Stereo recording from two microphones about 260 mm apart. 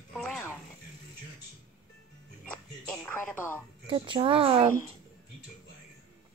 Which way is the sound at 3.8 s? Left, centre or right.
Centre.